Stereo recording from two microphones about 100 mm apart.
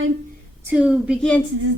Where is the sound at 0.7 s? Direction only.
10° right (ahead or behind).